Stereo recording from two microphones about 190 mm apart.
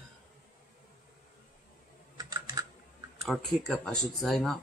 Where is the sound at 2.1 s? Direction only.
20° right (ahead or behind).